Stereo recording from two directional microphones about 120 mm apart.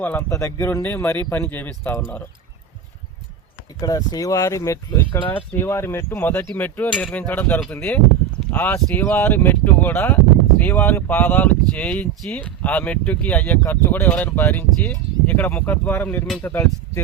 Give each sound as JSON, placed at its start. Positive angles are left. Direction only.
{"t": 0.0, "sound": "speech", "side_deg": 15}
{"t": 3.8, "sound": "speech", "side_deg": 30}